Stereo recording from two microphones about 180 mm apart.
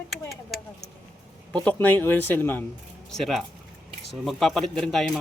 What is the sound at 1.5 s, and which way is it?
Speech, 10° left (ahead or behind).